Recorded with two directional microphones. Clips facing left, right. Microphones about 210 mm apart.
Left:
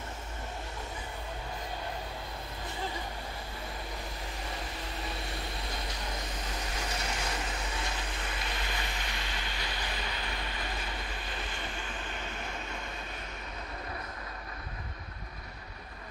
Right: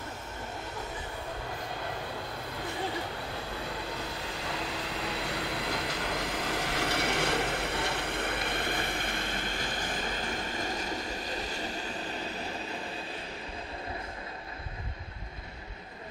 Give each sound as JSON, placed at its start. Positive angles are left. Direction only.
{"t": 4.5, "sound": "vehicle", "side_deg": -75}